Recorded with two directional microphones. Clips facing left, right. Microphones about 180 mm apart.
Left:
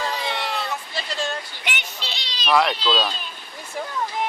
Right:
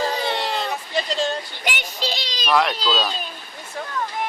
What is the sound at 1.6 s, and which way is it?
Child singing, 40° right (ahead or behind).